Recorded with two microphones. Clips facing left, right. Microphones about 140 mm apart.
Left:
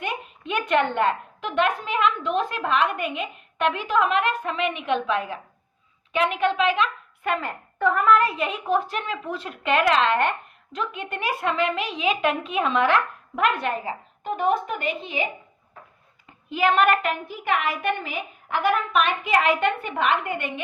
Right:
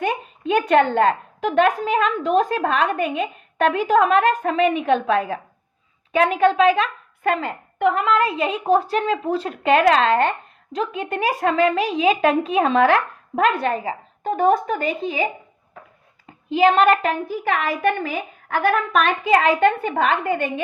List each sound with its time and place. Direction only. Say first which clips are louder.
0.0 s a woman's voice: right 7 dB; 35° right (ahead or behind)
7.3 s a woman's voice: right 3 dB; 20° right (ahead or behind); by 15.3 s 35° right (ahead or behind)
16.5 s a woman's voice: right 5 dB; 30° right (ahead or behind)